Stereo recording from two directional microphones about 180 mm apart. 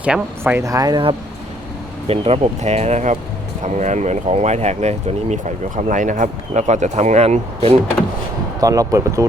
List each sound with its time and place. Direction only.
0.0 s speech: 10° right (ahead or behind)
2.0 s speech: 35° right (ahead or behind)
8.6 s speech: 20° right (ahead or behind)